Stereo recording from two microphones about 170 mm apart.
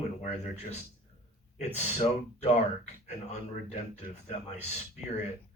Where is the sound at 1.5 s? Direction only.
40° left (ahead or behind).